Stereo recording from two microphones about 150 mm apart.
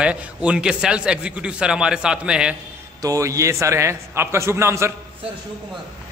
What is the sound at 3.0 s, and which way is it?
A man's voice, 20° right (ahead or behind).